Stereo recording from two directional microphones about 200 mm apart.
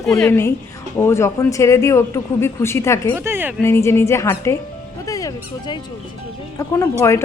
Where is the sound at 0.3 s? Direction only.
10° left (ahead or behind).